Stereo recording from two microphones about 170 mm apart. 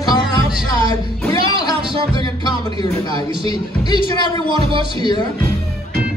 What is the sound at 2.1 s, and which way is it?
Music, 25° left (ahead or behind).